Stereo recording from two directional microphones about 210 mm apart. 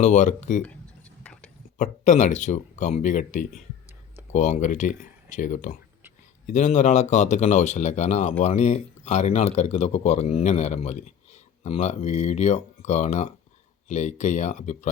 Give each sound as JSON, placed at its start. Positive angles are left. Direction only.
{"t": 0.0, "sound": "speech", "side_deg": 35}
{"t": 1.2, "sound": "a sound", "side_deg": 5}
{"t": 1.8, "sound": "speech", "side_deg": 35}